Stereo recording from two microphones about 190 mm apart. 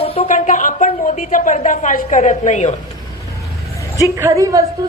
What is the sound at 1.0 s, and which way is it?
A man's voice, 45° left (ahead or behind).